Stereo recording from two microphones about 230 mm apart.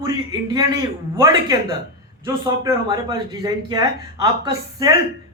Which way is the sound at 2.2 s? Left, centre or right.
Centre.